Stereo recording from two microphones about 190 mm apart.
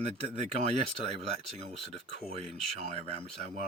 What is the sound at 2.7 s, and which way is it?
Speech, 35° right (ahead or behind).